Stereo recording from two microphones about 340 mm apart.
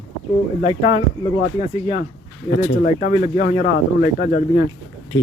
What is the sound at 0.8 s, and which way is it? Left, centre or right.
Speech, centre.